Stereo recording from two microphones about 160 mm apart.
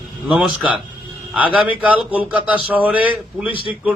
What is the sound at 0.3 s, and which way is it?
A man's voice, 5° right (ahead or behind).